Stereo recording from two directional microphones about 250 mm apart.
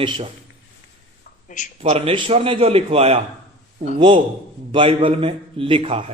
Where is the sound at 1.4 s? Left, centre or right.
Left.